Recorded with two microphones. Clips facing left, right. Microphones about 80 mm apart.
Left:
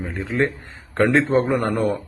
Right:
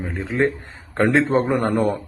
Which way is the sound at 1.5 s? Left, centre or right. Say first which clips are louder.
Right 1 dB; right.